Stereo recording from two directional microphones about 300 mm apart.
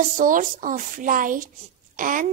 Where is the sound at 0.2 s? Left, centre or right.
Right.